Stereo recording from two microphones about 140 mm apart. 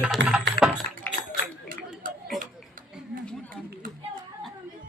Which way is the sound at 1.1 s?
15° left (ahead or behind).